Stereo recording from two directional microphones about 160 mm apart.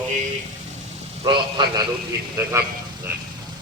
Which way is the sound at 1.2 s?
30° right (ahead or behind).